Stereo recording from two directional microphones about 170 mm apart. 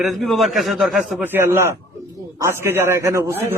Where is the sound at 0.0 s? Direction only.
Centre (ahead or behind).